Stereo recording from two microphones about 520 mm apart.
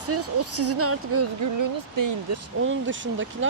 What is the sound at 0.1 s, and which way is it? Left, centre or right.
Speech, right.